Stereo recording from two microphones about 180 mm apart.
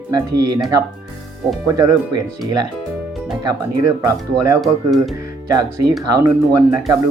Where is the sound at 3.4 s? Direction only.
15° right (ahead or behind).